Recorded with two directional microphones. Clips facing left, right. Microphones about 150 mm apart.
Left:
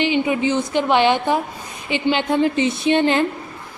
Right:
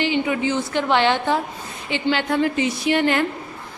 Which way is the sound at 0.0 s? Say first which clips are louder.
Left 2 dB; 20° left (ahead or behind).